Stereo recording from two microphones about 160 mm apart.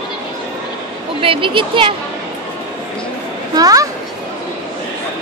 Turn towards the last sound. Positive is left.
turn(degrees=-25)  # may be behind; listen again after turning